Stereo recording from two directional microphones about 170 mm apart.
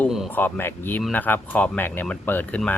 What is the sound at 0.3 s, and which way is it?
Speech, 10° left (ahead or behind).